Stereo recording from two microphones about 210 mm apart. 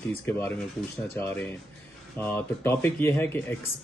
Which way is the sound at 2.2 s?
10° left (ahead or behind).